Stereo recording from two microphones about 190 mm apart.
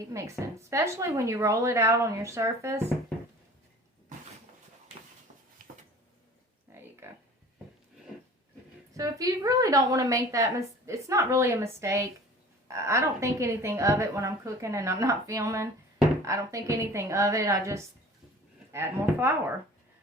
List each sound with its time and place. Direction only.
0.1 s a woman's voice: 15° right (ahead or behind)
6.7 s a sound: 10° right (ahead or behind)
9.0 s a woman's voice: 20° right (ahead or behind)